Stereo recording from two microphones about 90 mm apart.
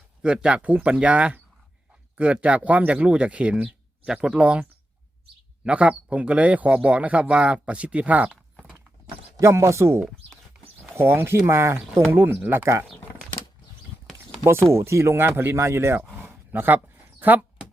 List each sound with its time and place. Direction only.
0.2 s speech: 10° right (ahead or behind)
5.6 s speech: 15° right (ahead or behind)
9.4 s speech: 30° right (ahead or behind)
14.4 s speech: 30° right (ahead or behind)
16.1 s a sound: 20° right (ahead or behind)